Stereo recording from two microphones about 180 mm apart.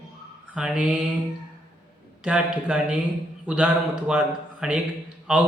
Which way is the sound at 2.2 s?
5° right (ahead or behind).